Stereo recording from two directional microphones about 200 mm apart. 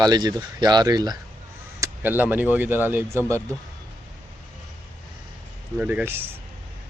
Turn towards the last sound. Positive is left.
turn(degrees=-10)  # may be behind; listen again after turning